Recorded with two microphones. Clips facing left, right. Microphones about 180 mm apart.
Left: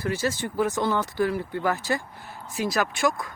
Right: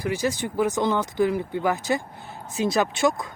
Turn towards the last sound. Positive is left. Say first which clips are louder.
# right 3 dB
turn(degrees=-25)  # may be behind; listen again after turning